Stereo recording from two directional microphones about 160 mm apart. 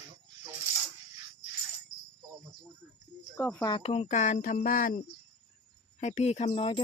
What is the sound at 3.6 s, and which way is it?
Speech, 35° left (ahead or behind).